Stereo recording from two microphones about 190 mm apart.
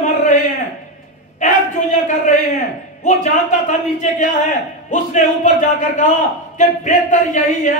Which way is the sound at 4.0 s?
40° left (ahead or behind).